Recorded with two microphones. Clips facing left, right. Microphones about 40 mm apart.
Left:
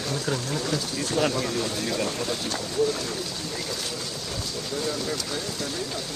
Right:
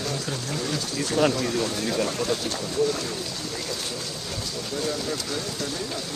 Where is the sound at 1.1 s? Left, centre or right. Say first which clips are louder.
Right 3 dB; right.